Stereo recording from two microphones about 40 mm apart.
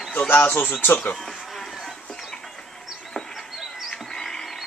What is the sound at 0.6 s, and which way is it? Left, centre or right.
Speech, left.